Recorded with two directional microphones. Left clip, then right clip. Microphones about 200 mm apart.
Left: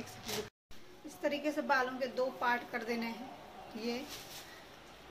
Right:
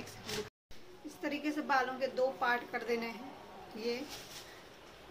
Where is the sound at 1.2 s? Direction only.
Centre (ahead or behind).